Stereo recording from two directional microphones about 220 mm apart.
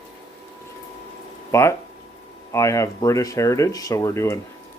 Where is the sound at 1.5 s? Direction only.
10° left (ahead or behind).